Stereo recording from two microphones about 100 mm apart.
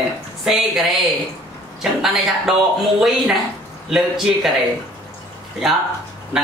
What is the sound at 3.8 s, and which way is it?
Speech, centre (ahead or behind).